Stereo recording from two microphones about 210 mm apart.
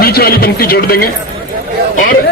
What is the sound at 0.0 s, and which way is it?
A man's voice, 45° left (ahead or behind).